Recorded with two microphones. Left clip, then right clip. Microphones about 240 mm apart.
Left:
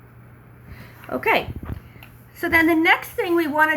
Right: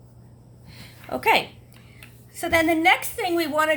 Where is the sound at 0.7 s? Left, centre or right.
Right.